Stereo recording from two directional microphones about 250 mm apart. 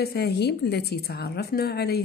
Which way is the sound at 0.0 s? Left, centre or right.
Left.